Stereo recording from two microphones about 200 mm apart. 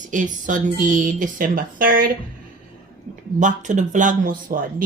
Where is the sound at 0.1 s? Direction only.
40° right (ahead or behind).